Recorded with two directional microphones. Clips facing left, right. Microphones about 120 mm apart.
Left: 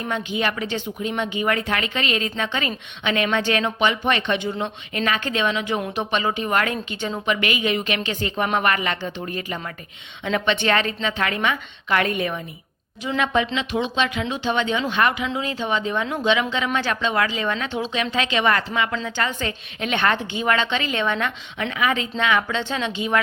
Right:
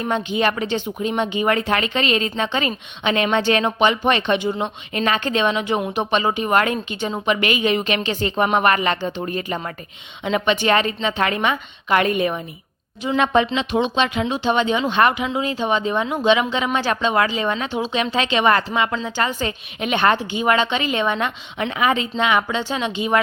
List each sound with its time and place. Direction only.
0.0 s speech: 25° right (ahead or behind)
10.2 s speech: 15° right (ahead or behind)
13.1 s speech: 30° right (ahead or behind)
13.7 s speech: 20° right (ahead or behind)
17.7 s a woman's voice: 10° right (ahead or behind)
17.9 s a woman's voice: 25° right (ahead or behind)